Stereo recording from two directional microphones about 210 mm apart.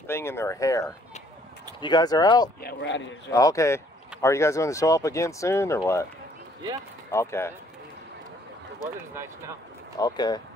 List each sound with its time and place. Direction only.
0.0 s speech: 10° left (ahead or behind)
2.6 s speech: 55° left (ahead or behind)
3.3 s speech: 15° left (ahead or behind)
7.1 s speech: 15° left (ahead or behind)
9.9 s speech: 20° left (ahead or behind)